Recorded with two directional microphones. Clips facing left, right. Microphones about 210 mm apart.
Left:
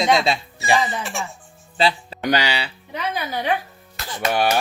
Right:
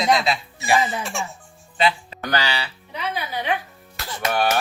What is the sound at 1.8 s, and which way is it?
Speech, 30° left (ahead or behind).